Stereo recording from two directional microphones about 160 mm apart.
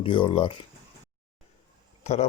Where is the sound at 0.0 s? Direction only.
30° left (ahead or behind).